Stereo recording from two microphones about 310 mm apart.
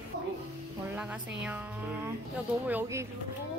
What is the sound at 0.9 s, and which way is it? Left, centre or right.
Music, centre.